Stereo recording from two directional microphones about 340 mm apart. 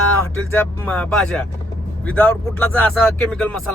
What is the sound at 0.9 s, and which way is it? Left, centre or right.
Speech, centre.